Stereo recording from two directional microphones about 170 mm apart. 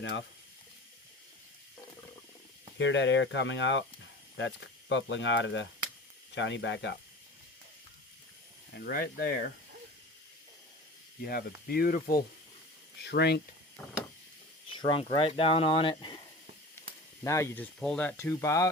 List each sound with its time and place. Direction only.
0.0 s speech: 90° left
2.7 s speech: 90° left
8.7 s speech: 65° left (ahead or behind)
11.3 s speech: 70° left (ahead or behind)
13.0 s speech: 85° left
14.7 s speech: 30° left (ahead or behind)
17.2 s speech: 15° left (ahead or behind)
18.2 s speech: 15° left (ahead or behind)